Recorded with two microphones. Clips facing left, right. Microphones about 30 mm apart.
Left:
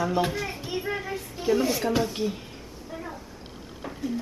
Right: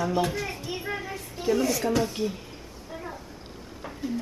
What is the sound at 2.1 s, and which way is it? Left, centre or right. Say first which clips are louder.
Speech: left 1 dB; centre.